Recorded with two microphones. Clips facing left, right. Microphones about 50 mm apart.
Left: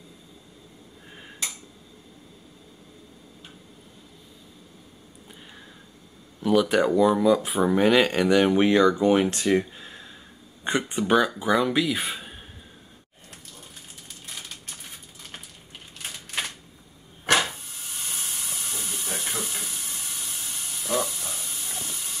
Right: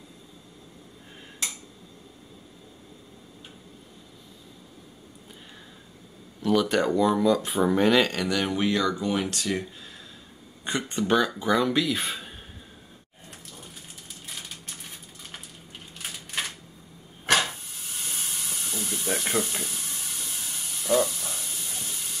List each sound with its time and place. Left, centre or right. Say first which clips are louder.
6.4 s speech: left 2 dB; centre
8.1 s speech: left 7 dB; left
10.8 s speech: left 2 dB; centre
17.3 s hiss: left 1 dB; centre
19.4 s a sound: right 1 dB; centre
21.8 s steam: left 1 dB; centre